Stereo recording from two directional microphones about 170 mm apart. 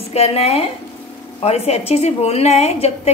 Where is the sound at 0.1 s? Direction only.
35° left (ahead or behind).